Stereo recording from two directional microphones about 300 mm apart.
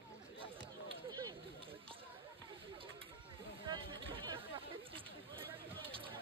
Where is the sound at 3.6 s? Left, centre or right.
Centre.